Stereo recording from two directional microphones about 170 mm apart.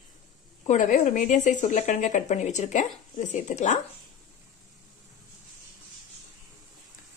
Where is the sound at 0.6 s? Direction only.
50° left (ahead or behind).